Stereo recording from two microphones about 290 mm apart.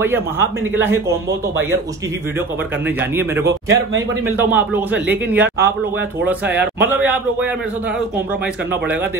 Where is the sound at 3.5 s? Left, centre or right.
Right.